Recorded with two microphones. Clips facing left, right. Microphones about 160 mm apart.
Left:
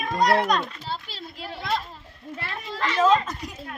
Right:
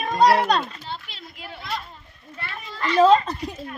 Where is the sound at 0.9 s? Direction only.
35° left (ahead or behind).